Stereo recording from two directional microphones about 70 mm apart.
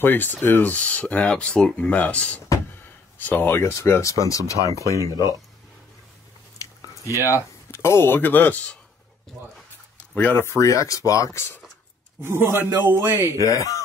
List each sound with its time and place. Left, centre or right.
0.0 s speech: left
4.6 s speech: right
4.8 s speech: left
6.6 s biting: left
7.7 s speech: left
10.3 s speech: left
11.3 s speech: left
12.2 s a man's voice: right
13.5 s speech: left